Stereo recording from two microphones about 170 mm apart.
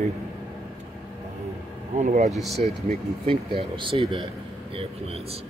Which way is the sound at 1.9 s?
40° right (ahead or behind).